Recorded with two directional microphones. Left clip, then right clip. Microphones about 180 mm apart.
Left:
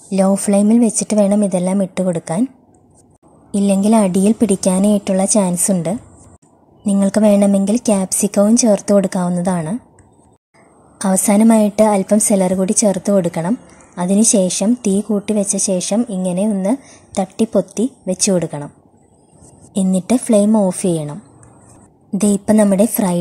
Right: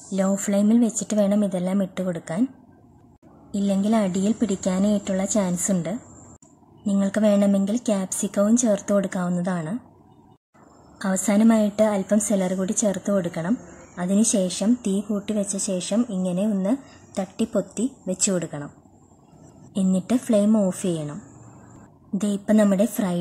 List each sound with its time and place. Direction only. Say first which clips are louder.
0.1 s a woman's voice: left 9 dB; 20° left (ahead or behind)
3.5 s a woman's voice: left 9 dB; 25° left (ahead or behind)
7.0 s a woman's voice: left 8 dB; 20° left (ahead or behind)
11.0 s a woman's voice: left 8 dB; 20° left (ahead or behind)
19.7 s a woman's voice: left 7 dB; 20° left (ahead or behind)
22.2 s a woman's voice: left 7 dB; 20° left (ahead or behind)